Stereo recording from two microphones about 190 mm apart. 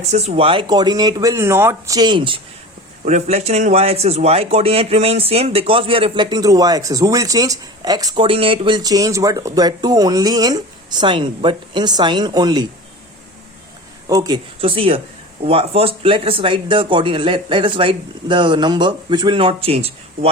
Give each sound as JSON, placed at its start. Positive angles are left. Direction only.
{"t": 0.0, "sound": "speech", "side_deg": -35}
{"t": 3.0, "sound": "speech", "side_deg": -35}
{"t": 14.1, "sound": "speech", "side_deg": -20}